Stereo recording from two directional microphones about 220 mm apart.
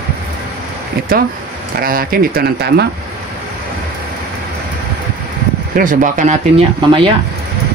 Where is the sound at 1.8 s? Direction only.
40° right (ahead or behind).